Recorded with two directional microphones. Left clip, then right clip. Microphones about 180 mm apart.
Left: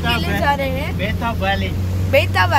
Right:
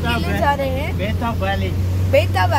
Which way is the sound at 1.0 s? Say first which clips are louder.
Left 1 dB; 55° right (ahead or behind).